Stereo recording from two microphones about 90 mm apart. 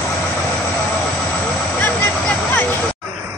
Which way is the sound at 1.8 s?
20° left (ahead or behind).